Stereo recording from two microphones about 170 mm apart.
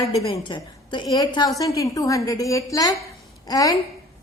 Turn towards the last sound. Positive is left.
turn(degrees=20)  # may be behind; listen again after turning